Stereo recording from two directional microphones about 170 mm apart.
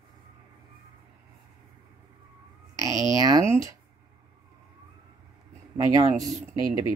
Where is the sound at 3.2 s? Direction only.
20° right (ahead or behind).